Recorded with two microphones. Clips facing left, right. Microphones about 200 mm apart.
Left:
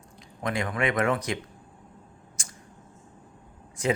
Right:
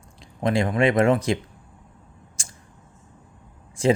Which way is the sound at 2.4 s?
25° right (ahead or behind).